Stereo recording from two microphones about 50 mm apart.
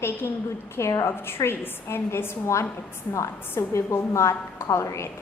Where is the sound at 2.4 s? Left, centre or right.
Left.